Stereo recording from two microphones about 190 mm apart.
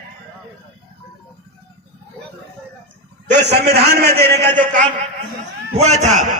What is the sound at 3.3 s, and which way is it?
A man's voice, 60° right (ahead or behind).